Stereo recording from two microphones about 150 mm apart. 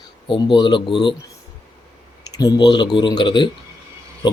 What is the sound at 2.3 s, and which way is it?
Speech, 25° left (ahead or behind).